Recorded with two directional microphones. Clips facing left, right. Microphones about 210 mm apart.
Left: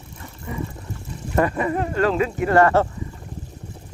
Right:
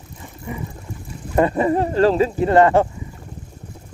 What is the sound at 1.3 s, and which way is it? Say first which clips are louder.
Speech: right 4 dB; 25° right (ahead or behind).